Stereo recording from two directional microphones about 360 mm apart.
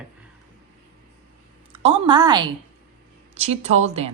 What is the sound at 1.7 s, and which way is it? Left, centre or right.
A woman's voice, centre.